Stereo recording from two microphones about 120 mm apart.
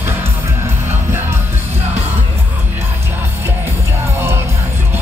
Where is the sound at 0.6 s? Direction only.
20° right (ahead or behind).